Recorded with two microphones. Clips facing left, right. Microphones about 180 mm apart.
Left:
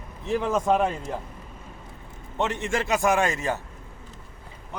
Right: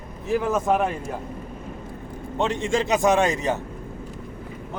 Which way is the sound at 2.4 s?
15° right (ahead or behind).